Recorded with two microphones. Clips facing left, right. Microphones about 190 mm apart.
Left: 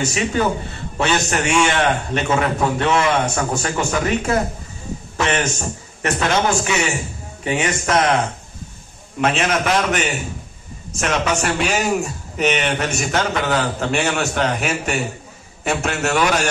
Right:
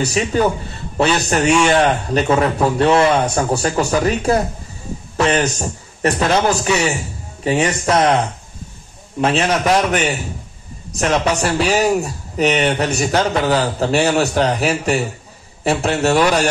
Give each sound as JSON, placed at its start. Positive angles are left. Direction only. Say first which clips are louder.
{"t": 0.0, "sound": "speech", "louder": "right 3 dB", "side_deg": -35}
{"t": 9.2, "sound": "speech", "louder": "right 2 dB", "side_deg": -35}